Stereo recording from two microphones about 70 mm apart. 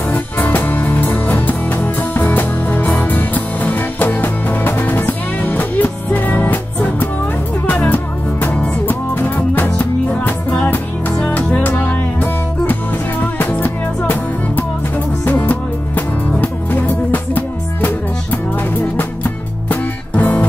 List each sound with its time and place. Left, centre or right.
0.1 s music: left
15.2 s music: left